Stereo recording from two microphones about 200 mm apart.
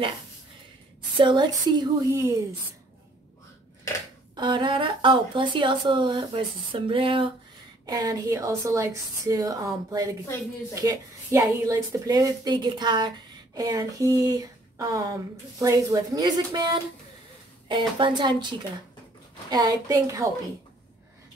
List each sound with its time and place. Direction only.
1.1 s speech: 25° right (ahead or behind)
4.4 s speech: 25° right (ahead or behind)